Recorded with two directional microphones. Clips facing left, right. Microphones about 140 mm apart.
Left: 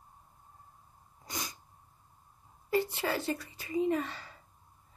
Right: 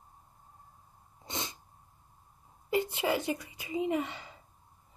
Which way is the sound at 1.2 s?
25° right (ahead or behind).